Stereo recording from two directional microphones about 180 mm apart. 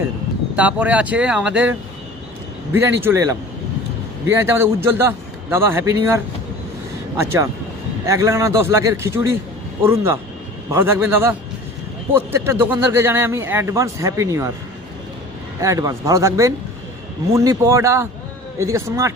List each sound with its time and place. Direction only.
0.5 s speech: 10° right (ahead or behind)
2.7 s speech: 15° right (ahead or behind)
4.3 s speech: 15° right (ahead or behind)
8.0 s speech: 15° right (ahead or behind)
15.6 s speech: 20° right (ahead or behind)